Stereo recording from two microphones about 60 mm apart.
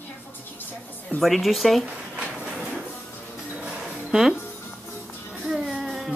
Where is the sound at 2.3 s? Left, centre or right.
Centre.